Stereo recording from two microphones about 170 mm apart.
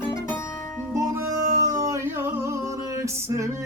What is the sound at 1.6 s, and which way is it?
Music, 20° right (ahead or behind).